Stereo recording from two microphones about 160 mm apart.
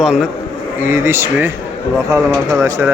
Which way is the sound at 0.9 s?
15° right (ahead or behind).